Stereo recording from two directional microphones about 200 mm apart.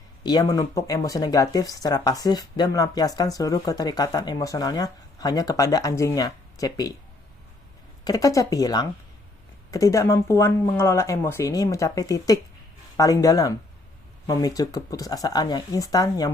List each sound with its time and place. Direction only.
0.2 s speech: 20° left (ahead or behind)
8.0 s speech: 15° left (ahead or behind)